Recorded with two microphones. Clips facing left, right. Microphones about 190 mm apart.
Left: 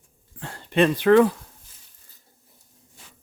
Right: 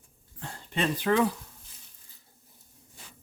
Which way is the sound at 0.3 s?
75° left (ahead or behind).